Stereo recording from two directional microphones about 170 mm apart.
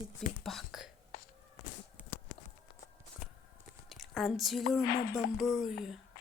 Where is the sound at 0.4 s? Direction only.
Centre (ahead or behind).